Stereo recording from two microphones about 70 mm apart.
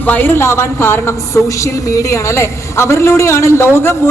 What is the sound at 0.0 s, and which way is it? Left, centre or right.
A woman's voice, left.